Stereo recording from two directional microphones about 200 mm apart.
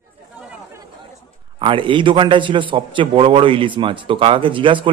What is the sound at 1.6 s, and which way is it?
A man's voice, 25° right (ahead or behind).